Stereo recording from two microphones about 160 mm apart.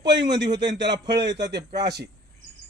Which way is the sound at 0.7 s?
90° right.